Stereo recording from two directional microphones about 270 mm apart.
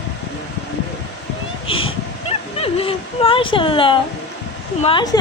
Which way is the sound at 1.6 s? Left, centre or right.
Centre.